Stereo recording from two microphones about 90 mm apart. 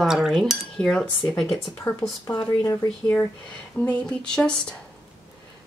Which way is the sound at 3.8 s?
10° left (ahead or behind).